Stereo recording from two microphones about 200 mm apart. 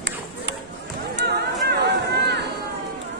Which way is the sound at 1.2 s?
55° right (ahead or behind).